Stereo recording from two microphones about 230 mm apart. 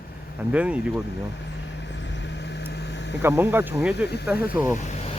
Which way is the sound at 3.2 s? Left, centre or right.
Centre.